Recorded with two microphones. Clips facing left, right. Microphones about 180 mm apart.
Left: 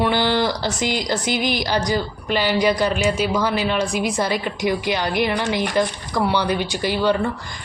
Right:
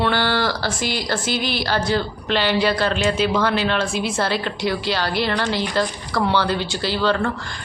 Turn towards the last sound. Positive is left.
turn(degrees=15)  # may be behind; listen again after turning